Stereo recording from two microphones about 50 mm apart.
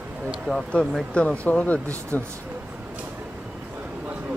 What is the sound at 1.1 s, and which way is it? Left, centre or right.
Speech, left.